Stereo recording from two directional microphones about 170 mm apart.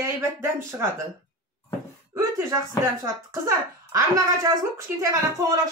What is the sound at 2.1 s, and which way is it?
Speech, 20° right (ahead or behind).